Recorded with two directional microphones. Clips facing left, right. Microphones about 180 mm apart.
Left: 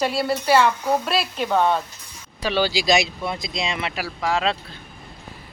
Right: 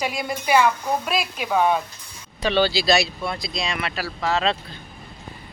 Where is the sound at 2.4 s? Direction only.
10° left (ahead or behind).